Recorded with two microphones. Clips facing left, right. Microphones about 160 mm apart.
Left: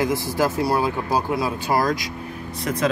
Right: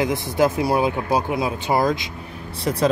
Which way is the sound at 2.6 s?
35° right (ahead or behind).